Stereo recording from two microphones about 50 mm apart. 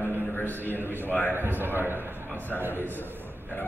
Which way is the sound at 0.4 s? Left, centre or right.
Left.